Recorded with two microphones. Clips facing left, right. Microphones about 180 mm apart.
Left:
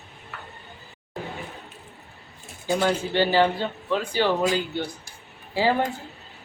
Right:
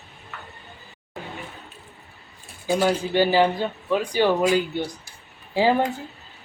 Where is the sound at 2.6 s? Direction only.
10° right (ahead or behind).